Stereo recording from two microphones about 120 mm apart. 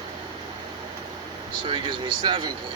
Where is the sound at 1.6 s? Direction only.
45° right (ahead or behind).